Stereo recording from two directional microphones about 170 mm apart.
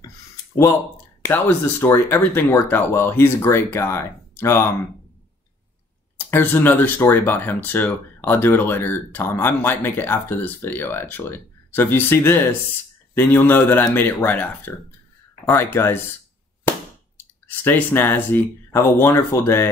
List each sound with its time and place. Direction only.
1.2 s speech: 15° left (ahead or behind)
6.1 s speech: 10° left (ahead or behind)
17.5 s speech: 10° left (ahead or behind)